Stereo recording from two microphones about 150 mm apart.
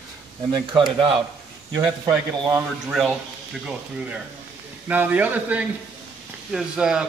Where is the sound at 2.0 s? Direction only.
15° right (ahead or behind).